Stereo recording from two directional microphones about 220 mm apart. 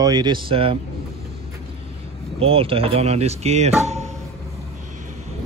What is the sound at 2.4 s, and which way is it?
Speech, 25° right (ahead or behind).